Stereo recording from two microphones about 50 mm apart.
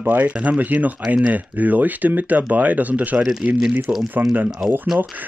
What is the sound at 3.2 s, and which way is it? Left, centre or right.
Speech, centre.